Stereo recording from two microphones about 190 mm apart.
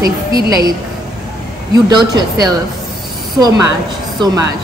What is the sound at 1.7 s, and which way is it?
Speech, 20° right (ahead or behind).